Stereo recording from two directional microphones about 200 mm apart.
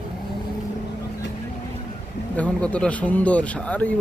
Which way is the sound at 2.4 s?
5° left (ahead or behind).